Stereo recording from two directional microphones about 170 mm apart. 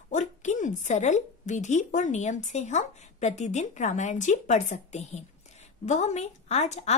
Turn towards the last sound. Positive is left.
turn(degrees=40)  # may be behind; listen again after turning